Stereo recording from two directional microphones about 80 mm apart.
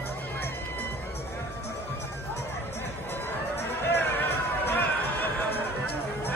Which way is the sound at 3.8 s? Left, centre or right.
Left.